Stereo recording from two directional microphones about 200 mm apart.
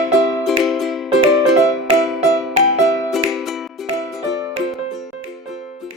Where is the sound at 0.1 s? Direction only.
Centre (ahead or behind).